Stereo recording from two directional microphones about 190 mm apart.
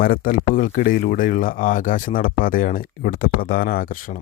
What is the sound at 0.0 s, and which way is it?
Speech, 45° left (ahead or behind).